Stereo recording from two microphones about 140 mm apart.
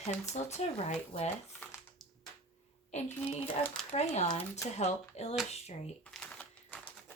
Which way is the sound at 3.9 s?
55° left (ahead or behind).